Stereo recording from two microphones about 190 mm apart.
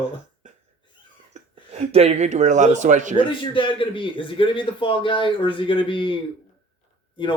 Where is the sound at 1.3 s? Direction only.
35° right (ahead or behind).